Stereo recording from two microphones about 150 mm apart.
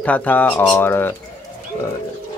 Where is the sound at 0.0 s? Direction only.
10° left (ahead or behind).